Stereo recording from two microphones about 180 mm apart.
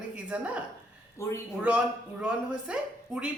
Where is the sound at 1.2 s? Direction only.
15° left (ahead or behind).